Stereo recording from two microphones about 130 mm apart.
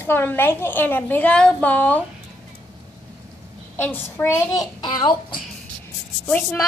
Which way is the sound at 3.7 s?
15° left (ahead or behind).